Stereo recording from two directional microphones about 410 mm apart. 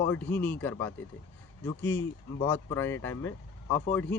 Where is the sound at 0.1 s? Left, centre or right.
Centre.